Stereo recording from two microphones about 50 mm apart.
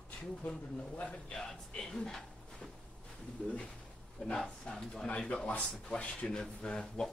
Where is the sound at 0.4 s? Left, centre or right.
Left; by 2.7 s centre.